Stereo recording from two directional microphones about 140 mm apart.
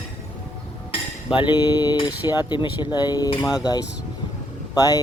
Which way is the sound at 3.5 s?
25° left (ahead or behind).